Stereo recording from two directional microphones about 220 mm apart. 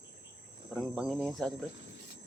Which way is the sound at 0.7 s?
Centre (ahead or behind).